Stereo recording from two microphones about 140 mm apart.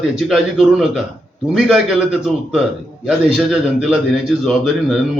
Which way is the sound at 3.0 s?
5° right (ahead or behind).